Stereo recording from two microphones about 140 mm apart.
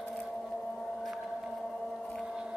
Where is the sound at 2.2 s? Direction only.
5° right (ahead or behind).